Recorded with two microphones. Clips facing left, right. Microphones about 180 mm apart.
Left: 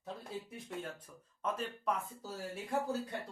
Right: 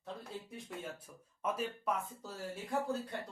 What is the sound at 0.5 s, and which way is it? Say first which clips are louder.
Speech: left 1 dB; centre (ahead or behind).